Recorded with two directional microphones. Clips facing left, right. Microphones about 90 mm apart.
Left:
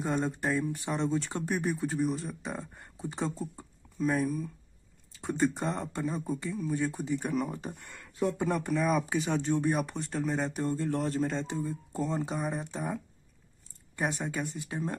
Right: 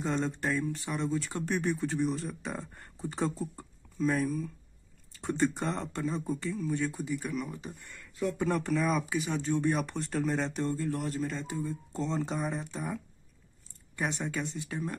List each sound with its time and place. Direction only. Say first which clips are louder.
0.0 s speech: left 1 dB; 15° left (ahead or behind)
1.4 s speech: even; 10° left (ahead or behind)
6.9 s speech: left 3 dB; 30° left (ahead or behind)
7.7 s speech: left 2 dB; 65° left (ahead or behind)
8.2 s speech: left 2 dB; 30° left (ahead or behind)
8.5 s speech: right 2 dB; centre (ahead or behind)
9.0 s speech: left 2 dB; 35° left (ahead or behind)
9.5 s speech: right 1 dB; 15° left (ahead or behind)
9.8 s speech: even; 5° left (ahead or behind)
10.8 s speech: left 3 dB; 35° left (ahead or behind)
11.5 s speech: left 1 dB; 15° left (ahead or behind)
12.5 s speech: left 2 dB; 20° left (ahead or behind)
14.2 s speech: even; 15° left (ahead or behind)